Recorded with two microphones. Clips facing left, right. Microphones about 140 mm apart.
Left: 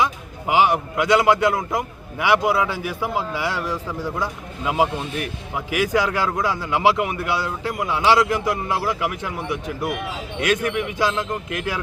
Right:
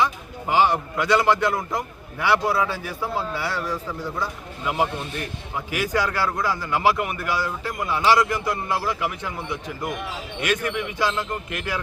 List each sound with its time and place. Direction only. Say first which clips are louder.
0.0 s a man's voice: left 1 dB; 10° left (ahead or behind)